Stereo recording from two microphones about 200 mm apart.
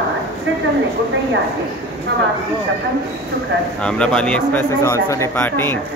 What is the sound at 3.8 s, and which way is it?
A man's voice, 5° left (ahead or behind).